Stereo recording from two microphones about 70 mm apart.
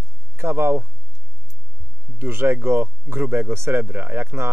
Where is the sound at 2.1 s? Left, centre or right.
Right.